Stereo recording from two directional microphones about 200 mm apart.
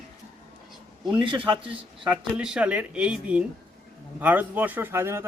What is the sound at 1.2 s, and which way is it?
Speech, 25° right (ahead or behind).